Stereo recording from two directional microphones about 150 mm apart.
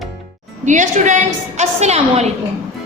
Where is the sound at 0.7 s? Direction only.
55° right (ahead or behind).